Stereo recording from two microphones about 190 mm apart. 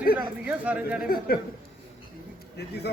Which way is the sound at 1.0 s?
50° left (ahead or behind).